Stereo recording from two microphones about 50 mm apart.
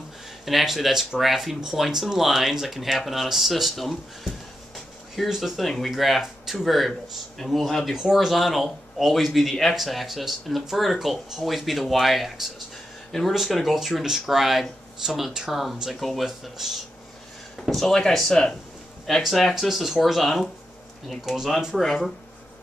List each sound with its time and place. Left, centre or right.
0.5 s speech: centre
4.7 s a sound: centre
5.9 s speech: centre
7.9 s speech: centre
17.6 s speech: centre